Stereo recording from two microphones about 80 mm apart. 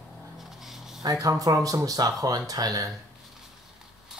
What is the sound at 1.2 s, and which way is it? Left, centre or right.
Speech, right.